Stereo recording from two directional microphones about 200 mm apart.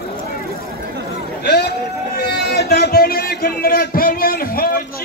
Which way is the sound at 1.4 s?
55° left (ahead or behind).